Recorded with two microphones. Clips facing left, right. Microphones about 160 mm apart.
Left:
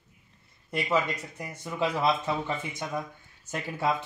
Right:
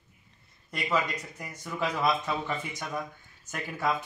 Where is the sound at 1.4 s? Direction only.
25° left (ahead or behind).